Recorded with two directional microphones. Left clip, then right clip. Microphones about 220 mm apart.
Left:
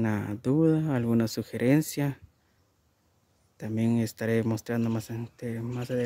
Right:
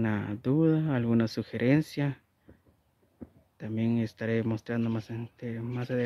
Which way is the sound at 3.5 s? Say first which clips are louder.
Left 2 dB; 15° left (ahead or behind).